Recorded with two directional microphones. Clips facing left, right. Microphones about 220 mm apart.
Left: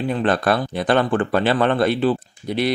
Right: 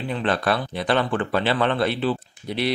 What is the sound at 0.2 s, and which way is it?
Speech, 50° left (ahead or behind).